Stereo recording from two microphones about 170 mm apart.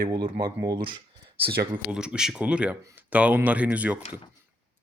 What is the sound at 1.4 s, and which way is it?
Speech, 70° right (ahead or behind).